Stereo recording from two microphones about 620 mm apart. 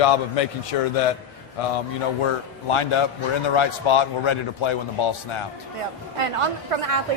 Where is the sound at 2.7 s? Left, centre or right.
Left.